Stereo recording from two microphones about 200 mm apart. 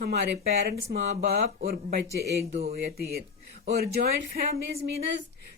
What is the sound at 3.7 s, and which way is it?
Speech, 50° right (ahead or behind).